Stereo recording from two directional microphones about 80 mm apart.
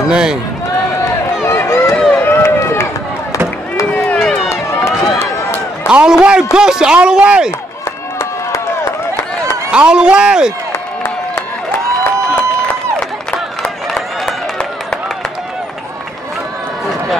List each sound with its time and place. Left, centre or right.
0.1 s a man's voice: centre
1.4 s run: left
4.0 s run: centre
4.5 s run: left
5.9 s speech: centre
9.7 s a man's voice: centre
13.6 s a sound: centre